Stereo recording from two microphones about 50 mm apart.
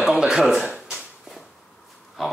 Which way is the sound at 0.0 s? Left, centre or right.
Centre.